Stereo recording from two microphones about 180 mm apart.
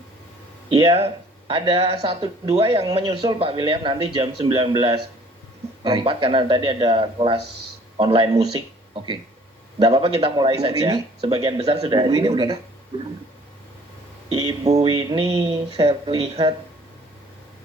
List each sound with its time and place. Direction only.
0.9 s speech: 35° right (ahead or behind)
9.7 s speech: 25° right (ahead or behind)
14.3 s speech: 20° right (ahead or behind)
14.7 s music: 35° right (ahead or behind)
14.9 s speech: 25° right (ahead or behind)